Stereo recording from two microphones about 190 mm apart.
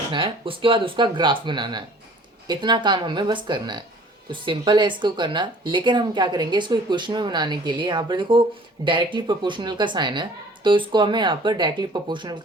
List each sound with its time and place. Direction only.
0.1 s speech: 25° right (ahead or behind)